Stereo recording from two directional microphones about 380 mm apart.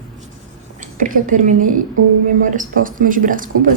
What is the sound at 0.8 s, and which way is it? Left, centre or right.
A woman's voice, right.